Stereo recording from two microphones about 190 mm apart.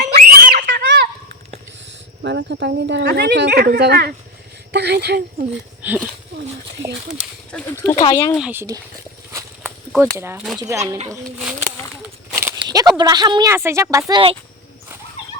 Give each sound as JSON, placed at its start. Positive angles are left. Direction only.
{"t": 0.0, "sound": "screaming", "side_deg": -50}
{"t": 2.2, "sound": "speech", "side_deg": -65}
{"t": 5.8, "sound": "speech", "side_deg": -10}
{"t": 7.5, "sound": "speech", "side_deg": 15}
{"t": 8.4, "sound": "speech", "side_deg": -5}
{"t": 9.6, "sound": "a sound", "side_deg": -5}
{"t": 10.2, "sound": "speech", "side_deg": -15}
{"t": 11.3, "sound": "a sound", "side_deg": -5}
{"t": 12.3, "sound": "speech", "side_deg": -10}